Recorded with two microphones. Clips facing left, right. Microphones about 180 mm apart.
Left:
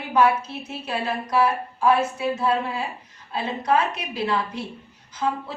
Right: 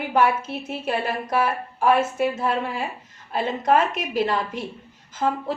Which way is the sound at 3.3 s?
50° right (ahead or behind).